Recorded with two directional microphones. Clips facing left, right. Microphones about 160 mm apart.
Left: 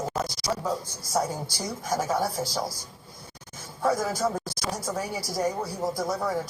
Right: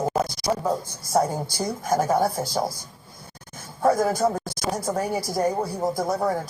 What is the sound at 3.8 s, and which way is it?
Speech, 55° right (ahead or behind).